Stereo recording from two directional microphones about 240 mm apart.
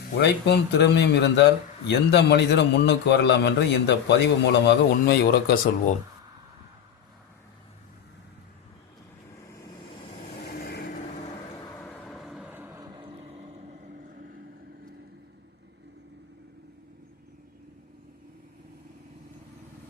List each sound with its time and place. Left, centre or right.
0.2 s a man's voice: left
10.4 s vehicle: left
11.8 s vehicle: centre; by 14.3 s right